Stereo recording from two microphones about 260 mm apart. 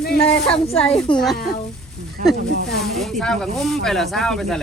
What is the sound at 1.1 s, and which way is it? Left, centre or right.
Speech, centre.